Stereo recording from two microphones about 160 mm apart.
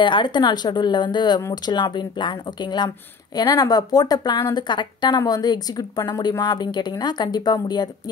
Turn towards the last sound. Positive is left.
turn(degrees=25)  # may be behind; listen again after turning